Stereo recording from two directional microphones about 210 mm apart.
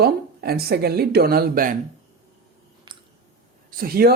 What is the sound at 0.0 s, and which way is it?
Speech, 50° right (ahead or behind).